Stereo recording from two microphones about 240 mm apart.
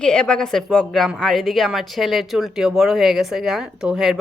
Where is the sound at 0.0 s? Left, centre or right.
Centre.